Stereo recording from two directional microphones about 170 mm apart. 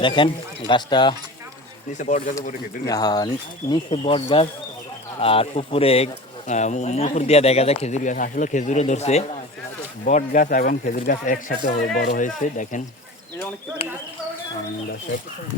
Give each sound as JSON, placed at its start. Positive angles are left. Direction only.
{"t": 0.0, "sound": "speech", "side_deg": 30}
{"t": 1.9, "sound": "speech", "side_deg": 45}
{"t": 2.8, "sound": "speech", "side_deg": 20}